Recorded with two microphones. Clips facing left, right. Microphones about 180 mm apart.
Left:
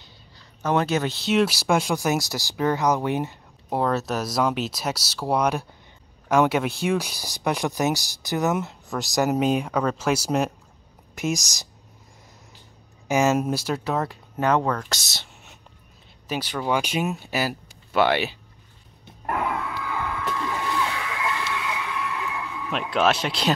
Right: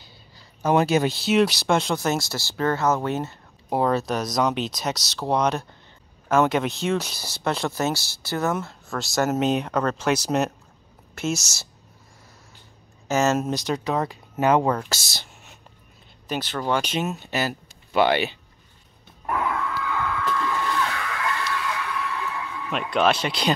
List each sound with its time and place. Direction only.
0.6 s speech: 10° right (ahead or behind); by 3.3 s 15° left (ahead or behind)
3.7 s speech: centre (ahead or behind)
13.1 s speech: 10° left (ahead or behind)
19.3 s a sound: 10° left (ahead or behind)